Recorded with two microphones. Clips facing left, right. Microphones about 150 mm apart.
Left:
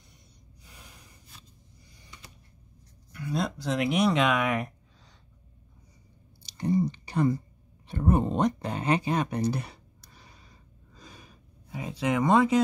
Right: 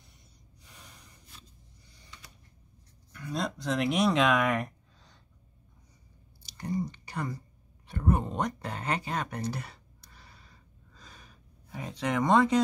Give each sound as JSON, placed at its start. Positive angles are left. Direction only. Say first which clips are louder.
{"t": 0.7, "sound": "snort", "louder": "left 1 dB", "side_deg": 0}
{"t": 3.1, "sound": "speech", "louder": "left 3 dB", "side_deg": 5}
{"t": 6.4, "sound": "chewing", "louder": "left 7 dB", "side_deg": 20}
{"t": 7.9, "sound": "speech", "louder": "left 4 dB", "side_deg": 25}
{"t": 11.0, "sound": "gasp", "louder": "left 4 dB", "side_deg": 10}
{"t": 11.7, "sound": "speech", "louder": "left 3 dB", "side_deg": 5}